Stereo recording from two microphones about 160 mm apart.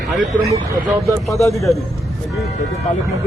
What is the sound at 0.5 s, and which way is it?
Speech, 20° right (ahead or behind).